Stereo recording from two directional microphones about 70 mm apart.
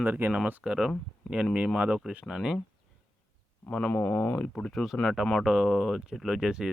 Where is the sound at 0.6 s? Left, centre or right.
Centre.